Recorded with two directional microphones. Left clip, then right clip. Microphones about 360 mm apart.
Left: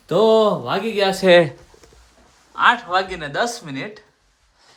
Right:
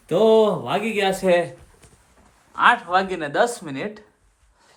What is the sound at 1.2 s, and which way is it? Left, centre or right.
Speech, left.